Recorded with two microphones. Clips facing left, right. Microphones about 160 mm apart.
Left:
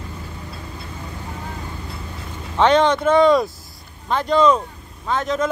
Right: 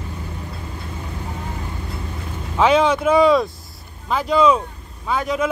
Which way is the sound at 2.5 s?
5° right (ahead or behind).